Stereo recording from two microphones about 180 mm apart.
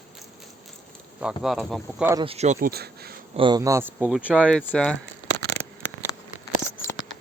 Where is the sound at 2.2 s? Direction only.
35° right (ahead or behind).